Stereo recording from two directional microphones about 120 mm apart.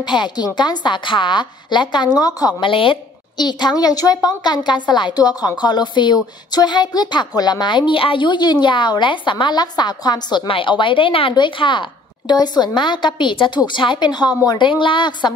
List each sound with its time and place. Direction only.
0.0 s a woman's voice: 40° left (ahead or behind)
2.6 s a woman's voice: 45° left (ahead or behind)